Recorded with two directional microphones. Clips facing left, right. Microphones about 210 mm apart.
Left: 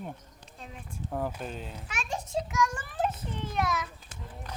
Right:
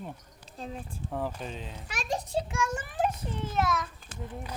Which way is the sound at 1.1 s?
Centre (ahead or behind).